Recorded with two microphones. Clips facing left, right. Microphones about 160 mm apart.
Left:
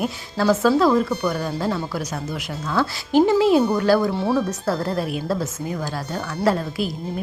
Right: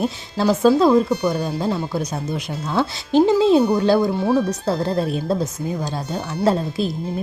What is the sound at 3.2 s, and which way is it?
A woman's voice, 20° right (ahead or behind).